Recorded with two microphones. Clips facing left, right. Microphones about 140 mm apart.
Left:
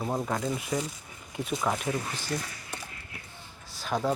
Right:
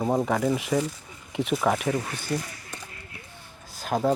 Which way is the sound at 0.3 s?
90° right.